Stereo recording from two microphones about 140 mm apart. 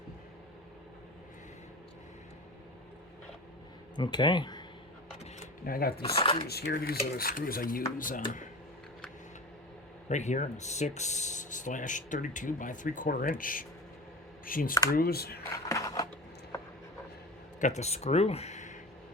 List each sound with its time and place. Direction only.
3.9 s speech: 35° left (ahead or behind)
5.6 s speech: 90° left
6.0 s speech: 40° left (ahead or behind)
6.7 s speech: 90° left; by 8.2 s 75° left (ahead or behind)
10.1 s speech: 55° left (ahead or behind); by 15.4 s 90° left
15.5 s a sound: 25° left (ahead or behind)
17.6 s speech: 55° left (ahead or behind)